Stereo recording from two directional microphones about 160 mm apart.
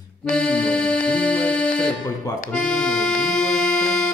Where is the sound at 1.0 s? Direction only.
5° left (ahead or behind).